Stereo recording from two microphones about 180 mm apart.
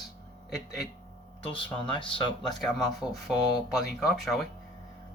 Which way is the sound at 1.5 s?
30° left (ahead or behind).